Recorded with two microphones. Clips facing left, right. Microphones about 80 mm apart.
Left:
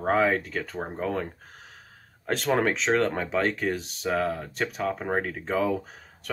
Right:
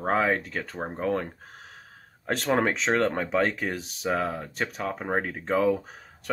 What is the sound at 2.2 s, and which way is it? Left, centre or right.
Speech, centre.